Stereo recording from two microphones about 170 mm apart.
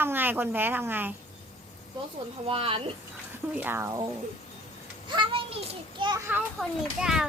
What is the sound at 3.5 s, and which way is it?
Speech, 10° right (ahead or behind).